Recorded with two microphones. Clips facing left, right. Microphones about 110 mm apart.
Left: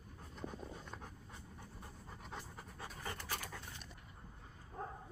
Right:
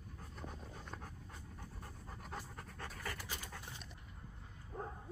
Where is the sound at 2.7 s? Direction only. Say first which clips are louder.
Right 1 dB; 10° left (ahead or behind).